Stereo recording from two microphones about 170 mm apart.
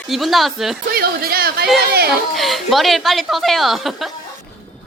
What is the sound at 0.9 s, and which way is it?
Speech, 60° right (ahead or behind).